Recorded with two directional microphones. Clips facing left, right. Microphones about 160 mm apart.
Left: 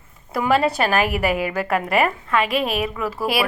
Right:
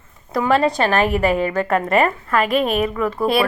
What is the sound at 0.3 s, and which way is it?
A woman's voice, 5° left (ahead or behind).